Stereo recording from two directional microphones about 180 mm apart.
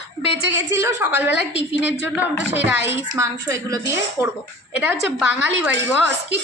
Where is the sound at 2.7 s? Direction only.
10° right (ahead or behind).